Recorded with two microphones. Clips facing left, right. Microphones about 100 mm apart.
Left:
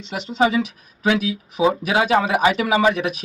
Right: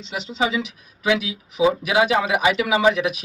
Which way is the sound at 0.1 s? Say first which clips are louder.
Left 4 dB; 45° left (ahead or behind).